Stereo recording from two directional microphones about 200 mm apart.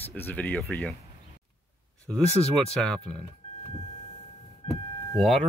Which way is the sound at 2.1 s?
5° left (ahead or behind).